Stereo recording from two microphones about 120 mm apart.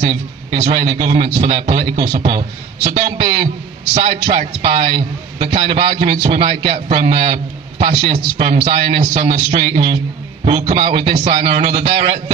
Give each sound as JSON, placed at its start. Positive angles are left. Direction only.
{"t": 0.0, "sound": "a man's voice", "side_deg": -50}
{"t": 10.4, "sound": "a man's voice", "side_deg": -60}